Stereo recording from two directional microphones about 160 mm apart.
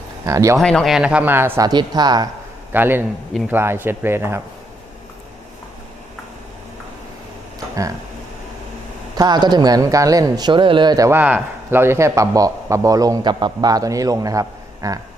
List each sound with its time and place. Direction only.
0.3 s speech: 20° right (ahead or behind)
0.6 s speech: 5° left (ahead or behind); by 2.3 s 25° right (ahead or behind)
2.7 s speech: 10° right (ahead or behind)
9.1 s speech: 25° right (ahead or behind)